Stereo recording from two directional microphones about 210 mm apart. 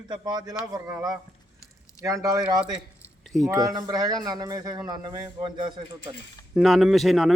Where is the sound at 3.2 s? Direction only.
Centre (ahead or behind).